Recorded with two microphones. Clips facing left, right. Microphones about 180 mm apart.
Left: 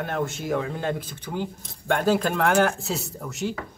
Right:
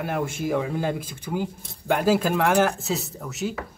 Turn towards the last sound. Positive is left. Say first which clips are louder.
# even
turn(degrees=0)  # may be behind; listen again after turning